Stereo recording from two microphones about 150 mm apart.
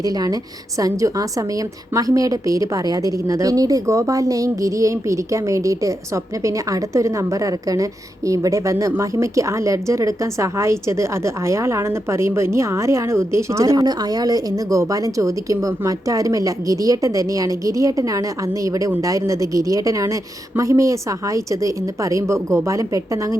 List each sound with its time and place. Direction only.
0.0 s a woman's voice: 25° right (ahead or behind)